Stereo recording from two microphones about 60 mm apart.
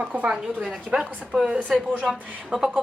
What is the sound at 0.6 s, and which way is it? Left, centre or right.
Speech, centre.